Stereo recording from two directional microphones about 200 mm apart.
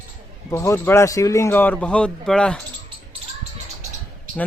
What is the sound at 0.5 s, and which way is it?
Speech, 15° left (ahead or behind).